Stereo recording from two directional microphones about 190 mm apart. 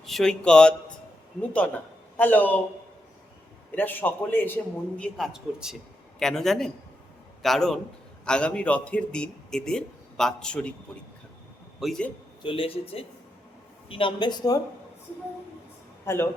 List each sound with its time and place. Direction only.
0.0 s speech: centre (ahead or behind)
3.8 s a man's voice: 10° left (ahead or behind)
11.8 s speech: centre (ahead or behind)
12.4 s speech: 30° left (ahead or behind)
16.0 s a man's voice: 15° left (ahead or behind)